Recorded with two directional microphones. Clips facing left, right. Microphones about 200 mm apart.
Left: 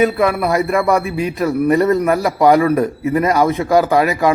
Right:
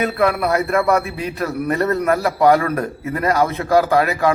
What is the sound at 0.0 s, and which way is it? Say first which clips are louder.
A man's voice: left 3 dB; 10° left (ahead or behind).